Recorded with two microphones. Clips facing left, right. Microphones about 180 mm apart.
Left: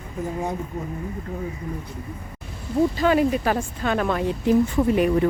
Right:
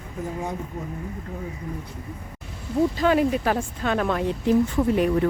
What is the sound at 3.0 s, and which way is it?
A woman's voice, centre (ahead or behind).